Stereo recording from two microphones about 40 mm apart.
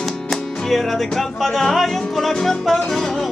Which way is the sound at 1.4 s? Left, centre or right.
Centre.